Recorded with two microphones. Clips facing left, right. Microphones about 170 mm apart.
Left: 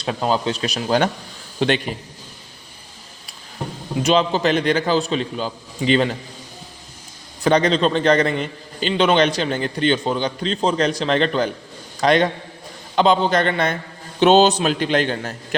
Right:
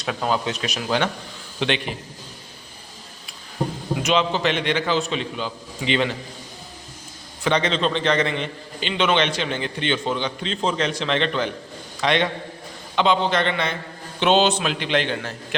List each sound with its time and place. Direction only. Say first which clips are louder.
0.0 s a man's voice: left 3 dB; 30° left (ahead or behind)
4.0 s a man's voice: left 4 dB; 35° left (ahead or behind)
7.4 s a man's voice: left 5 dB; 40° left (ahead or behind)